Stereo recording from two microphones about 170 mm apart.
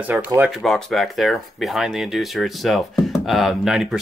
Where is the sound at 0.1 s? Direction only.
15° right (ahead or behind).